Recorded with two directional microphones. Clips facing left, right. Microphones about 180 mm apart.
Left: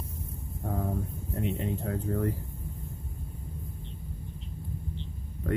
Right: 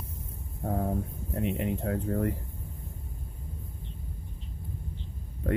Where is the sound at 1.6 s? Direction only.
20° right (ahead or behind).